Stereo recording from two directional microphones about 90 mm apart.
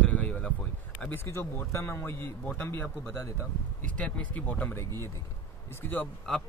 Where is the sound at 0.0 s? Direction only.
15° left (ahead or behind).